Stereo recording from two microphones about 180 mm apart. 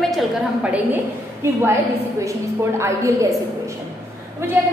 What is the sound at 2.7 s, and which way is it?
Speech, 15° right (ahead or behind).